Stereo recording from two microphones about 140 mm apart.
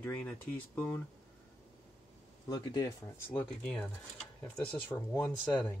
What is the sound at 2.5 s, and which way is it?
Speech, 30° left (ahead or behind).